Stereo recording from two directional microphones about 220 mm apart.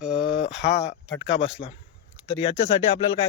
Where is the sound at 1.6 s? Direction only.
25° left (ahead or behind).